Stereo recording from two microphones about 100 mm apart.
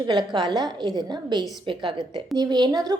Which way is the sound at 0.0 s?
45° right (ahead or behind).